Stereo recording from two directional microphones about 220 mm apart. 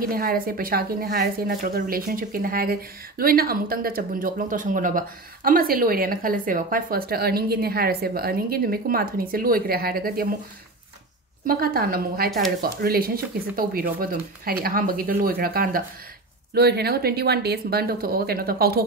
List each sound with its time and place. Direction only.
0.0 s a woman's voice: 40° right (ahead or behind)
11.4 s speech: 40° right (ahead or behind)
12.3 s speech: centre (ahead or behind)
12.6 s a woman's voice: 45° right (ahead or behind)